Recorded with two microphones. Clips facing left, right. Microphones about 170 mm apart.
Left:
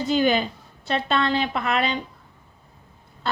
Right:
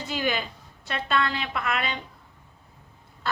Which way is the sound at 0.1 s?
30° left (ahead or behind).